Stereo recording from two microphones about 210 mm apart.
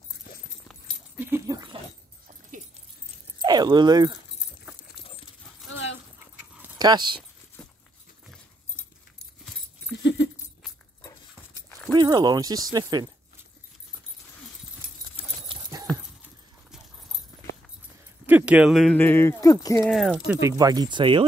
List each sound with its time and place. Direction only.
0.7 s dog: centre (ahead or behind); by 1.8 s 20° right (ahead or behind)
3.3 s speech: 20° right (ahead or behind)
5.7 s dog: 65° left (ahead or behind)
6.8 s speech: 20° right (ahead or behind)
10.0 s a sound: 60° left (ahead or behind)
11.0 s dog: 15° left (ahead or behind)
11.9 s speech: 20° right (ahead or behind)
15.4 s clip-clop: 20° right (ahead or behind)
18.2 s speech: 5° right (ahead or behind); by 19.9 s 15° left (ahead or behind)
19.9 s speech: centre (ahead or behind)
20.2 s speech: 15° right (ahead or behind)